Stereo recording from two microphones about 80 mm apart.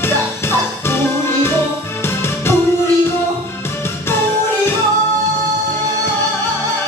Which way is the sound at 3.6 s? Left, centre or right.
Left.